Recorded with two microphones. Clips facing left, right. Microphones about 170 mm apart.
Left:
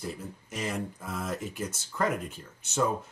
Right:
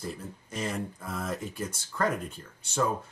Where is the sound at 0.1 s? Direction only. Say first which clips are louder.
Even; centre (ahead or behind).